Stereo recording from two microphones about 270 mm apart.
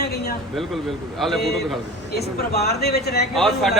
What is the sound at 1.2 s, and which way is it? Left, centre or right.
Speech, centre.